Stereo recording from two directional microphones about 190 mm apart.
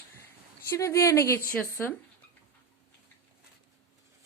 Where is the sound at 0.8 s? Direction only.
15° left (ahead or behind).